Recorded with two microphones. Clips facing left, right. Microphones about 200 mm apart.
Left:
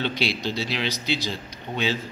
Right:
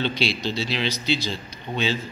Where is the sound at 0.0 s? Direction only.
15° left (ahead or behind).